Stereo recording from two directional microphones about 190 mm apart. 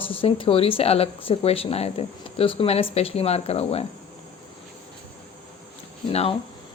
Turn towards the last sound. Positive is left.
turn(degrees=30)  # may be behind; listen again after turning